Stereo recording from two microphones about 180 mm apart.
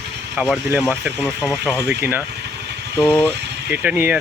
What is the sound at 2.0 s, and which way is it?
Speech, 10° right (ahead or behind).